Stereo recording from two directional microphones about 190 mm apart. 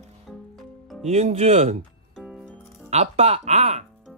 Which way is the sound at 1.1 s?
35° right (ahead or behind).